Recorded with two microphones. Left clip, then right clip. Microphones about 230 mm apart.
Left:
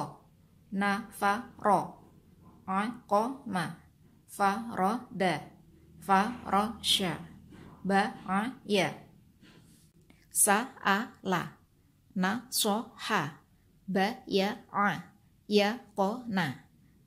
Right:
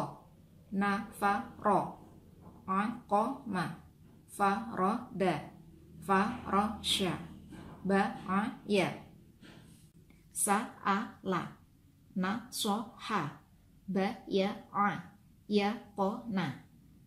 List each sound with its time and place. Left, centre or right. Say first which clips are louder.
0.7 s a woman's voice: left 2 dB; left
10.4 s speech: left 4 dB; left